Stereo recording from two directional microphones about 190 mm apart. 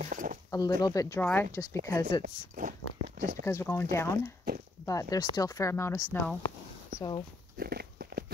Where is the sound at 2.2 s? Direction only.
45° right (ahead or behind).